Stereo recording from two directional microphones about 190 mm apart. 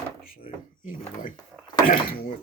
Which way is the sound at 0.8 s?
45° left (ahead or behind).